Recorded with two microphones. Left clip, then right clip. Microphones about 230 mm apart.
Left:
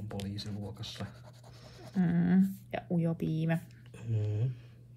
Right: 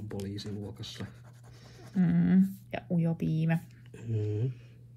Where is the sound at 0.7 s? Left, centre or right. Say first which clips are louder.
Even; centre.